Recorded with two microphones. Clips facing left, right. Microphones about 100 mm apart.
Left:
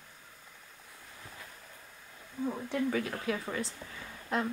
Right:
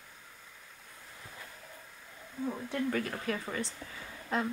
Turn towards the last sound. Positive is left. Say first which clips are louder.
# even
turn(degrees=0)  # may be behind; listen again after turning